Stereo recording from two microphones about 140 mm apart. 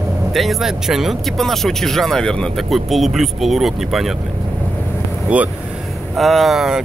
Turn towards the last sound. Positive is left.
turn(degrees=-5)  # may be behind; listen again after turning